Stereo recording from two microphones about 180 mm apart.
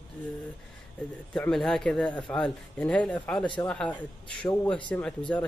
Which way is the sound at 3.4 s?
25° left (ahead or behind).